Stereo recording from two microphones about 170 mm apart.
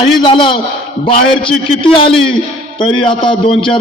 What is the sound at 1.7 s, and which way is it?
A man's voice, 30° left (ahead or behind).